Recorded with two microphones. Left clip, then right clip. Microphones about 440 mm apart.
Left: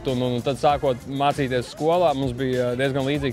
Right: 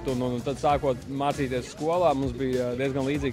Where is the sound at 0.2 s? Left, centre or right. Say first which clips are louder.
Left 7 dB; left.